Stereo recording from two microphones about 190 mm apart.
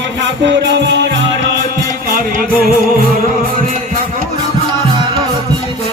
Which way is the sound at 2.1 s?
50° right (ahead or behind).